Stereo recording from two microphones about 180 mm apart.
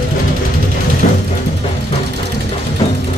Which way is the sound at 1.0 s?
45° left (ahead or behind).